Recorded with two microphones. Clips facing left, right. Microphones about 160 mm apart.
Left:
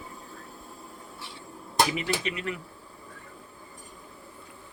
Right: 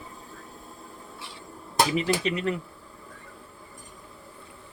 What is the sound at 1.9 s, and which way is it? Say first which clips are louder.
Speech: right 5 dB; 35° right (ahead or behind).